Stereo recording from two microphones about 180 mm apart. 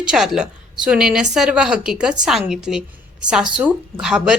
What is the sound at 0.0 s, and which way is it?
A woman's voice, 5° right (ahead or behind).